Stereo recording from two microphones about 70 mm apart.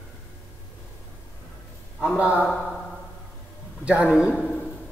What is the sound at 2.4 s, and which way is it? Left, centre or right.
Speech, left.